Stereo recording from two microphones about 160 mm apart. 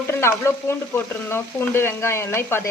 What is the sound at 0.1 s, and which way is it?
Speech, 15° left (ahead or behind).